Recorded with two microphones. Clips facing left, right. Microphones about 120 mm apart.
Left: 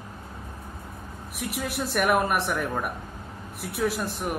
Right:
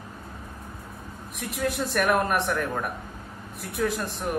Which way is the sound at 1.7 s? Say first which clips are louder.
Even; 10° left (ahead or behind).